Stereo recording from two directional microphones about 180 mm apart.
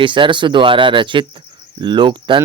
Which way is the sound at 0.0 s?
25° right (ahead or behind).